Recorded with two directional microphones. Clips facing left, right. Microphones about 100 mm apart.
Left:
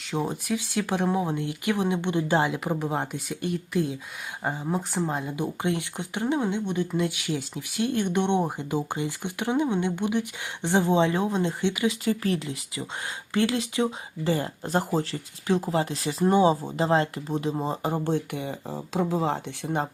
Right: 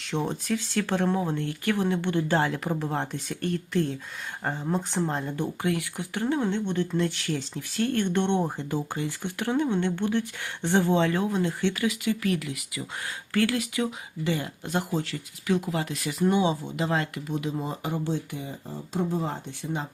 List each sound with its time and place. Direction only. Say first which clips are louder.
0.0 s speech: even; 5° left (ahead or behind)
5.5 s speech: even; 20° left (ahead or behind)
12.0 s speech: left 1 dB; 30° left (ahead or behind)
18.0 s speech: left 3 dB; 60° left (ahead or behind); by 19.7 s 90° left